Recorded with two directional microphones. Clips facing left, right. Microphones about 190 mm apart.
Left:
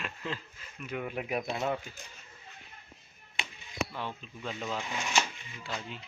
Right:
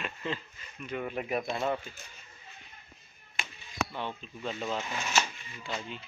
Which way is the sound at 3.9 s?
Centre (ahead or behind).